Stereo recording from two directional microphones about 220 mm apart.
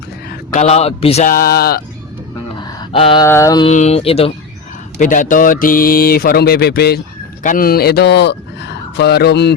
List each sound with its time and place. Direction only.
0.5 s speech: 30° left (ahead or behind); by 1.8 s 45° left (ahead or behind)
2.6 s a sound: 25° left (ahead or behind)
3.2 s mantra: 15° left (ahead or behind)
3.7 s speech: 30° left (ahead or behind); by 9.6 s 50° left (ahead or behind)